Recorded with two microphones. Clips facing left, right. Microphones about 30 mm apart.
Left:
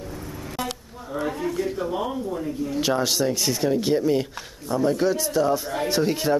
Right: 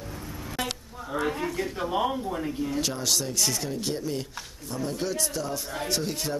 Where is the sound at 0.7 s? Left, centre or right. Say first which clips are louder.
Left 1 dB; centre.